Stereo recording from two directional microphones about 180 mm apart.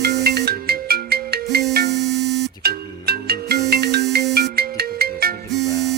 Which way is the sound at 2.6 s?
60° right (ahead or behind).